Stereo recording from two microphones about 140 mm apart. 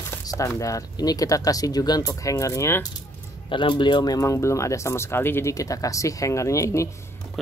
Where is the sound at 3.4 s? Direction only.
35° left (ahead or behind).